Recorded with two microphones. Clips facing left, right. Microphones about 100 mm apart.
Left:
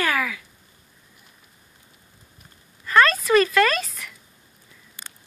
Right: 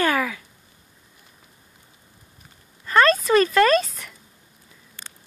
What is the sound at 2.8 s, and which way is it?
A child's voice, 30° right (ahead or behind).